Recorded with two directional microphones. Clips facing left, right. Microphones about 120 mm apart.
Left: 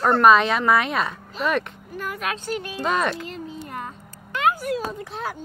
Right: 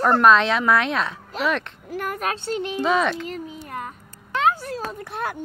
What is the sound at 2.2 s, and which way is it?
Speech, 35° right (ahead or behind).